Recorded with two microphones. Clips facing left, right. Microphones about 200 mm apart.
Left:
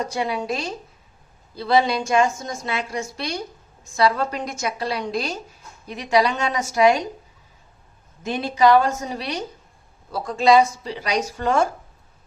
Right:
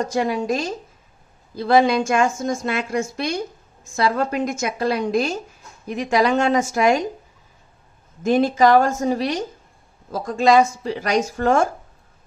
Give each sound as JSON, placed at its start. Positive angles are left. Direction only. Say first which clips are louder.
{"t": 0.0, "sound": "a woman's voice", "louder": "right 4 dB", "side_deg": -45}
{"t": 8.2, "sound": "a woman's voice", "louder": "right 4 dB", "side_deg": -45}